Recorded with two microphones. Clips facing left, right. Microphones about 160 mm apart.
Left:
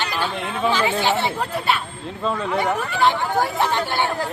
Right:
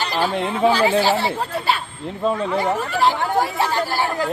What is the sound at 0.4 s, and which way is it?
Speech, 35° right (ahead or behind).